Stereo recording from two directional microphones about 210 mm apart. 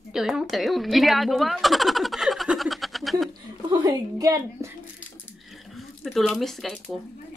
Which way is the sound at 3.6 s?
20° right (ahead or behind).